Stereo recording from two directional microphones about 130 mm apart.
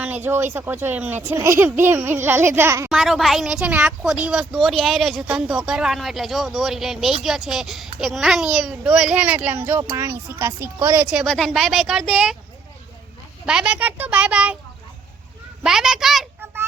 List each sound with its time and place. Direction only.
0.0 s a child's voice: 15° right (ahead or behind)
2.9 s a child's voice: centre (ahead or behind); by 11.0 s 15° right (ahead or behind)
11.1 s speech: centre (ahead or behind)
13.4 s a child's voice: 5° right (ahead or behind)
15.6 s speech: 5° right (ahead or behind)